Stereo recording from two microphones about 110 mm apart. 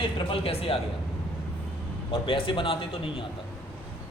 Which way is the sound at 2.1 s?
55° left (ahead or behind).